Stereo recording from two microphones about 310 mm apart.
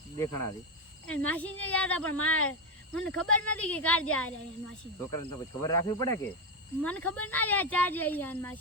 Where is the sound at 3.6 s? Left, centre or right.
Centre.